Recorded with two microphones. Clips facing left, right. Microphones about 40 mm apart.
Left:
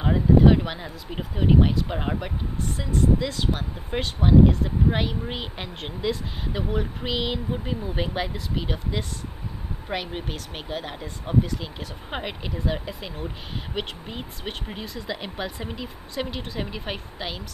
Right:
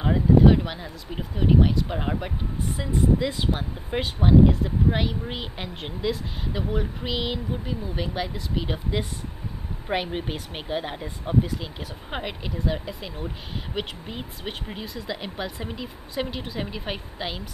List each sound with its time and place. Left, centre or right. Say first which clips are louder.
0.0 s speech: even; centre
2.8 s speech: even; centre
3.9 s speech: even; centre
7.5 s speech: left 2 dB; centre
8.6 s speech: right 1 dB; centre
8.9 s speech: right 2 dB; centre